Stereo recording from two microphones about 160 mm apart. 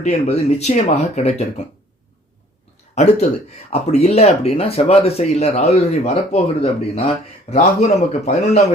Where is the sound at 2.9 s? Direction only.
45° left (ahead or behind).